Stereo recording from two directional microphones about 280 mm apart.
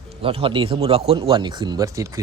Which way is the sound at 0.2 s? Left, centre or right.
Centre.